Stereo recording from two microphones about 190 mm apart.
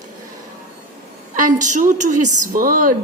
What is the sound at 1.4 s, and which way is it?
A woman's voice, 40° right (ahead or behind).